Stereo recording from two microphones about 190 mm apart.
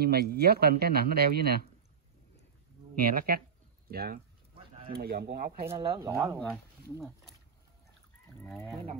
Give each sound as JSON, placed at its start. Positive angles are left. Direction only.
{"t": 0.0, "sound": "speech", "side_deg": -55}
{"t": 3.0, "sound": "speech", "side_deg": -50}
{"t": 5.7, "sound": "speech", "side_deg": -20}